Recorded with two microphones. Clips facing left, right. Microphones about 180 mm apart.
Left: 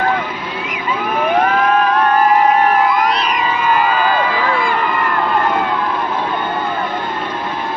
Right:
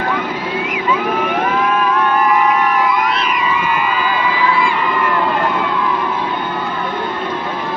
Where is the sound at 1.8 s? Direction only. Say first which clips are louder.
Left 2 dB; 45° left (ahead or behind).